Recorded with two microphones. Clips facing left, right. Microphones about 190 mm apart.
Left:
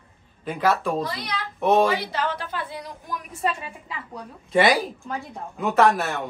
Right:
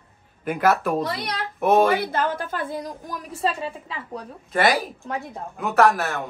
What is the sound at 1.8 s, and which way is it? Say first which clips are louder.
A woman's voice: right 3 dB; 55° right (ahead or behind).